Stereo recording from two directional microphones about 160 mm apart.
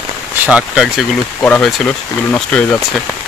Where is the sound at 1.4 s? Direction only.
10° left (ahead or behind).